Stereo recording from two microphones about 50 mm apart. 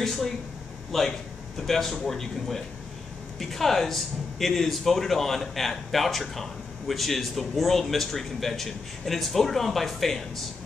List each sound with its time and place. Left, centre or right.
0.0 s speech: centre